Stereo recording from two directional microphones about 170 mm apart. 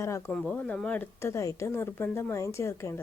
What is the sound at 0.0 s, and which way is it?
Speech, 15° left (ahead or behind).